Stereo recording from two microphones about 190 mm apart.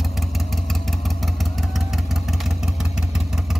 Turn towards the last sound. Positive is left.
turn(degrees=-5)  # may be behind; listen again after turning